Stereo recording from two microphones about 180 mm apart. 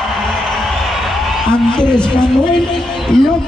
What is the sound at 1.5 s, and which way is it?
Speech, 5° left (ahead or behind).